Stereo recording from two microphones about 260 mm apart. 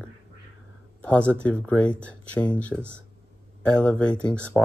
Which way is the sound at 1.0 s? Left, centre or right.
Centre.